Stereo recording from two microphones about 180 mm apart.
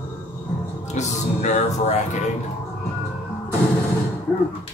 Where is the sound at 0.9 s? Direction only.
40° left (ahead or behind).